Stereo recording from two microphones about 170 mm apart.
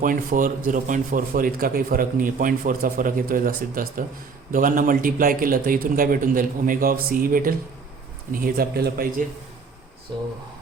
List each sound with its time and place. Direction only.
0.0 s a man's voice: 55° right (ahead or behind)
10.1 s speech: 30° right (ahead or behind)